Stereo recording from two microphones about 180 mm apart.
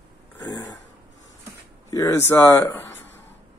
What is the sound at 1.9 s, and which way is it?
A man's voice, 20° left (ahead or behind).